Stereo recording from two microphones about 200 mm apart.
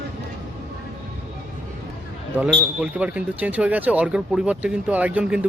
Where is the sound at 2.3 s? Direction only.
5° right (ahead or behind).